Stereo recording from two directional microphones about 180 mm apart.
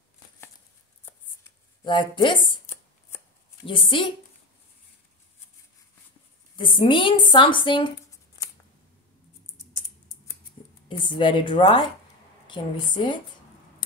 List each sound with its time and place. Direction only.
1.9 s speech: 25° left (ahead or behind)
3.6 s speech: 30° left (ahead or behind)
6.5 s speech: 25° left (ahead or behind)
10.9 s speech: 25° left (ahead or behind)